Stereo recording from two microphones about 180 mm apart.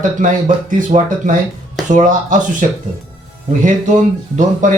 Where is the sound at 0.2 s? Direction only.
45° right (ahead or behind).